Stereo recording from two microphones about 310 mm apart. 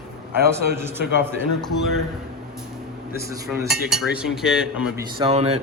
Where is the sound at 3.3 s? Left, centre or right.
Centre.